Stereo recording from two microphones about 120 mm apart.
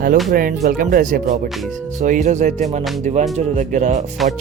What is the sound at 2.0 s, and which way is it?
Speech, 90° right.